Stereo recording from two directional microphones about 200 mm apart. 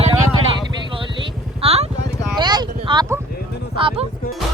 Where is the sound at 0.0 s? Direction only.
25° right (ahead or behind).